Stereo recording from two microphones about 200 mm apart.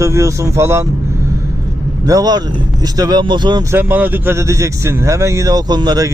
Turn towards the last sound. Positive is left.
turn(degrees=-20)  # may be behind; listen again after turning